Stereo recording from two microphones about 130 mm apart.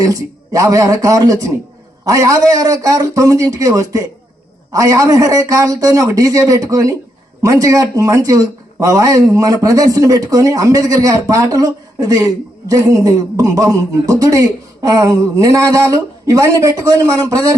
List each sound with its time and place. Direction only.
0.0 s speech: 25° right (ahead or behind)